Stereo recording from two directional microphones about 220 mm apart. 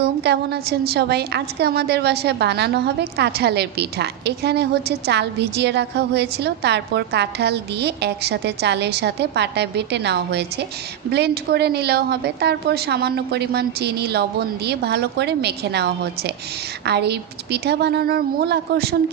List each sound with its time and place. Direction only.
0.0 s a woman's voice: 50° right (ahead or behind)